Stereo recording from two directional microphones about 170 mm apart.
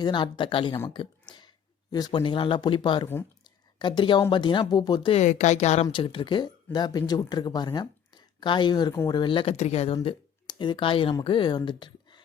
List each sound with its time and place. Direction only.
0.0 s speech: 30° left (ahead or behind)
3.4 s a sound: 25° left (ahead or behind)
4.3 s speech: 30° left (ahead or behind)
5.1 s a woman's voice: 45° left (ahead or behind); by 12.2 s 25° left (ahead or behind)